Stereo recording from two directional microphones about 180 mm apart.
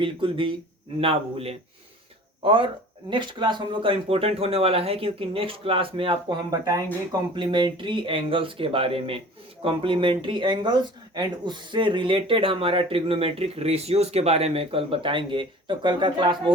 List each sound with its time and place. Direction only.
0.0 s speech: 30° right (ahead or behind)